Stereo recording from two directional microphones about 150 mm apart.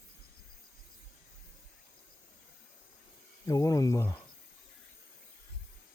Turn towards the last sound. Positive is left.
turn(degrees=20)  # may be behind; listen again after turning